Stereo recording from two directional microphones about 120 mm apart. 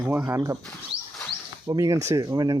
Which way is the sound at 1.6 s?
30° right (ahead or behind).